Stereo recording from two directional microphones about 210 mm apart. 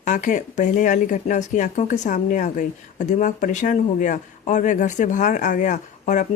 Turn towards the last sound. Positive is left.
turn(degrees=35)  # may be behind; listen again after turning